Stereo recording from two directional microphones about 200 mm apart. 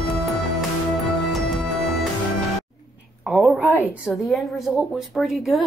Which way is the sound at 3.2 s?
5° right (ahead or behind).